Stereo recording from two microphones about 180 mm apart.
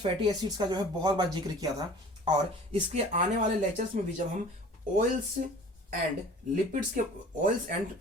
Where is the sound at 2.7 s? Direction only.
35° right (ahead or behind).